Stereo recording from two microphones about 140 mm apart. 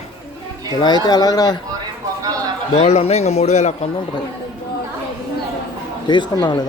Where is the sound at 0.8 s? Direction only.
30° left (ahead or behind).